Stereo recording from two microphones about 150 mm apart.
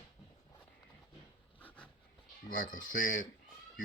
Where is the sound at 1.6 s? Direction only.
10° left (ahead or behind).